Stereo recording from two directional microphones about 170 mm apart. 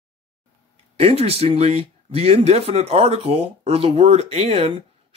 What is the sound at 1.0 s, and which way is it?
Speech, 35° right (ahead or behind).